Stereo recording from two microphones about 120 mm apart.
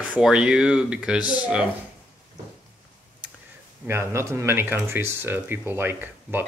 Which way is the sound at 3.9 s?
20° right (ahead or behind).